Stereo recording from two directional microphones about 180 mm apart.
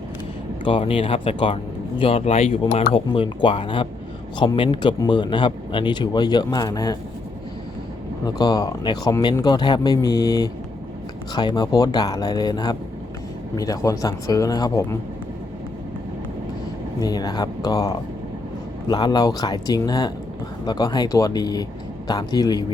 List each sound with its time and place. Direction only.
0.6 s speech: 30° left (ahead or behind)
8.2 s speech: 20° left (ahead or behind)
17.0 s speech: 20° left (ahead or behind)